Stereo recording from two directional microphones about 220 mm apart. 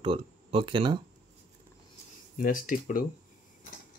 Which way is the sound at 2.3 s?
40° left (ahead or behind).